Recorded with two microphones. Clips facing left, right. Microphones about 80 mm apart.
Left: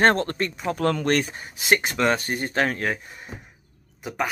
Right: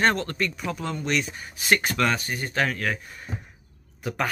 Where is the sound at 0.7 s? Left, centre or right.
Left.